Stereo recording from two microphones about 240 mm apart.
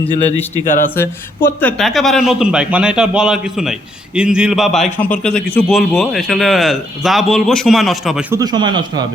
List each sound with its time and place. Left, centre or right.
0.5 s speech: left
0.9 s speech: centre
8.4 s a man's voice: centre